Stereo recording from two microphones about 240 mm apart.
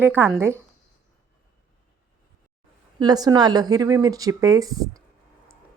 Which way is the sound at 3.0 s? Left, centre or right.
Centre.